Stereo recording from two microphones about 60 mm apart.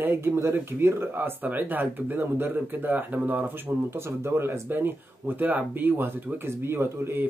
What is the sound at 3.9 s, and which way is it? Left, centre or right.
Speech, right.